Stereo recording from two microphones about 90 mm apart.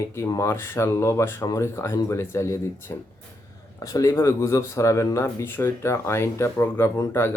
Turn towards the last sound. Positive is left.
turn(degrees=30)  # may be behind; listen again after turning